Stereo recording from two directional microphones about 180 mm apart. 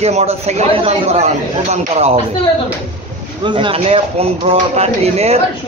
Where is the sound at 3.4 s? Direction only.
30° right (ahead or behind).